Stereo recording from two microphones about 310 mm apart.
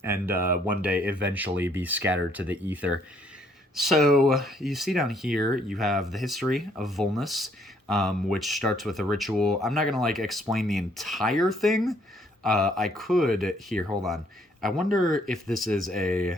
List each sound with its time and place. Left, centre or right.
0.0 s speech: centre
14.8 s speech: right
15.3 s speech: centre